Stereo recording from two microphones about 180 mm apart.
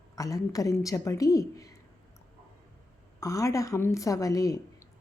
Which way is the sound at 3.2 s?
20° left (ahead or behind).